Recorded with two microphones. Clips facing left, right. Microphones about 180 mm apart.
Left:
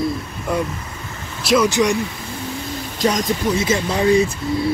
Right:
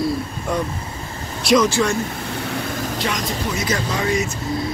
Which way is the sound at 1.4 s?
Centre (ahead or behind).